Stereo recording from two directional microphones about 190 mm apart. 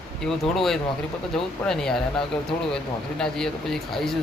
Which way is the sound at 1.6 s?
5° left (ahead or behind).